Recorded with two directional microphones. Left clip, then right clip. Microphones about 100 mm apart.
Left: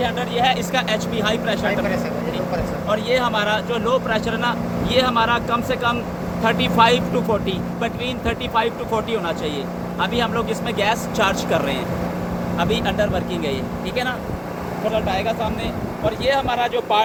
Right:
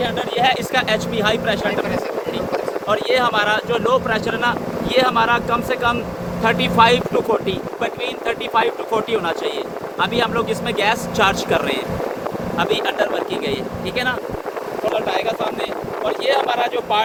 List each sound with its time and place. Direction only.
0.7 s speech: 85° right
2.9 s speech: 60° right (ahead or behind); by 7.0 s 35° right (ahead or behind)
8.3 s speech: 35° right (ahead or behind); by 11.8 s 90° right
12.5 s speech: 75° right (ahead or behind)
14.9 s speech: 45° right (ahead or behind)